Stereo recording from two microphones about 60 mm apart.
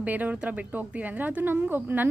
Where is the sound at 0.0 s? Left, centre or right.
Right.